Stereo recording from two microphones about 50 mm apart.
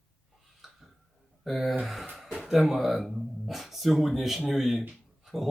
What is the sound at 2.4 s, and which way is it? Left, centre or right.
Speech, centre.